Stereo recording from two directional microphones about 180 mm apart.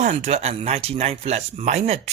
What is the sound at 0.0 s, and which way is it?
Speech, 40° right (ahead or behind).